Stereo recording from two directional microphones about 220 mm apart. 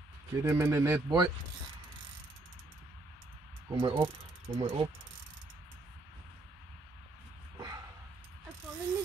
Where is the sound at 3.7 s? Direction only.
25° right (ahead or behind).